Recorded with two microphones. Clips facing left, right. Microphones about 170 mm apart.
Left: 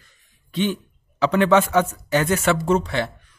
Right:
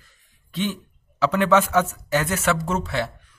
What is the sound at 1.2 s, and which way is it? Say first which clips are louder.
Speech: left 2 dB; 5° right (ahead or behind).